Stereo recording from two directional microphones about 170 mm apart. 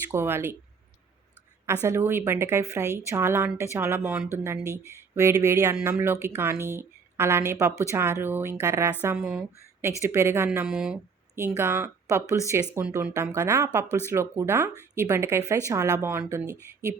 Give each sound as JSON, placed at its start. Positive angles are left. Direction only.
{"t": 0.1, "sound": "a woman's voice", "side_deg": -15}
{"t": 1.6, "sound": "a woman's voice", "side_deg": -15}
{"t": 10.7, "sound": "speech", "side_deg": 0}
{"t": 11.3, "sound": "a woman's voice", "side_deg": -15}